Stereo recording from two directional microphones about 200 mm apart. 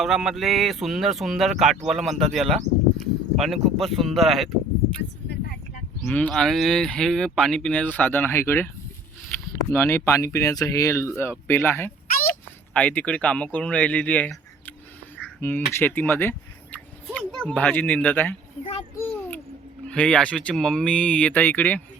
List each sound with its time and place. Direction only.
0.0 s speech: centre (ahead or behind)
6.1 s speech: 5° left (ahead or behind)
9.7 s speech: 10° left (ahead or behind)
15.2 s a sound: 10° left (ahead or behind)
15.7 s speech: 10° left (ahead or behind)
18.6 s a child's voice: 30° left (ahead or behind)
18.9 s a sound: 10° left (ahead or behind)
19.9 s speech: 5° left (ahead or behind)